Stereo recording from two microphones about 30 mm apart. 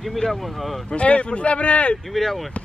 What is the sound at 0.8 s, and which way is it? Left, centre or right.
Speech, left.